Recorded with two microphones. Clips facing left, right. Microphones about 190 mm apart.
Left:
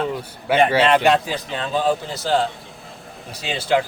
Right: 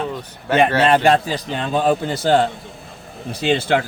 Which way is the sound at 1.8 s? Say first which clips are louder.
Right 4 dB; 60° right (ahead or behind).